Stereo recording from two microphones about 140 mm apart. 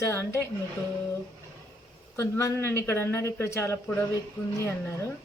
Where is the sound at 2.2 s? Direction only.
20° left (ahead or behind).